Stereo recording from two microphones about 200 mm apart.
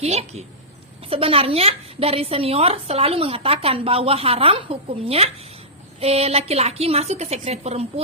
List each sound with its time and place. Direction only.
0.0 s a woman's voice: 30° right (ahead or behind)